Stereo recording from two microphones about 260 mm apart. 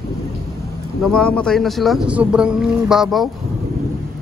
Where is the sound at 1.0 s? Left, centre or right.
Centre.